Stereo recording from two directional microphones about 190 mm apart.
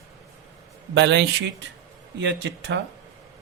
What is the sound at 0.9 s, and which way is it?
Speech, 65° right (ahead or behind).